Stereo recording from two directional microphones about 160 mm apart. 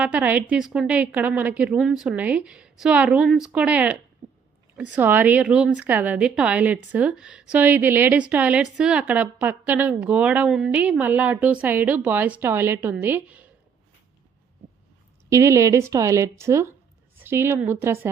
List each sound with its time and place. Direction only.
0.0 s a woman's voice: 10° right (ahead or behind)
4.2 s a sound: 45° right (ahead or behind)
4.8 s a woman's voice: 10° right (ahead or behind)
15.3 s a woman's voice: 20° right (ahead or behind)